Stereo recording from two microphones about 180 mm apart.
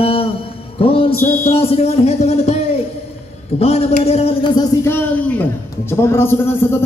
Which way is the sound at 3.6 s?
35° left (ahead or behind).